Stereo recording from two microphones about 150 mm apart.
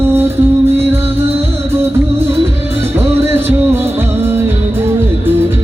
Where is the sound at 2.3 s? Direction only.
15° right (ahead or behind).